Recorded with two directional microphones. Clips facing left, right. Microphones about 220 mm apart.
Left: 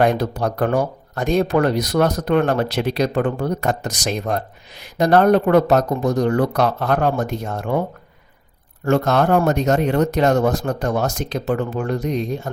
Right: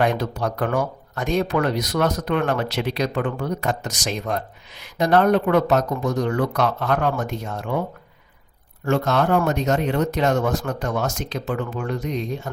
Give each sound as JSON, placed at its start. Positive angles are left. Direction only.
{"t": 0.0, "sound": "speech", "side_deg": 35}
{"t": 3.9, "sound": "speech", "side_deg": 55}
{"t": 8.8, "sound": "speech", "side_deg": 45}